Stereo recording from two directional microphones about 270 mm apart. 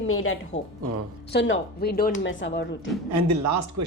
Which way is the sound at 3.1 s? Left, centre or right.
Right.